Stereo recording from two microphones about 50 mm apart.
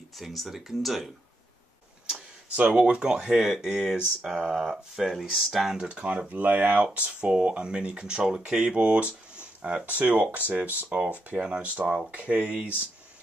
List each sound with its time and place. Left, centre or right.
0.2 s speech: centre
2.5 s speech: right; by 5.9 s centre
5.9 s speech: right